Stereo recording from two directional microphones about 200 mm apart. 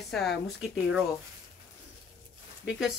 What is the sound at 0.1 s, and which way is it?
Speech, centre (ahead or behind).